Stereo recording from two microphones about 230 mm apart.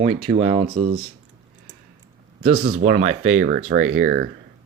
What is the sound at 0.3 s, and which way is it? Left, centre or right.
Speech, right.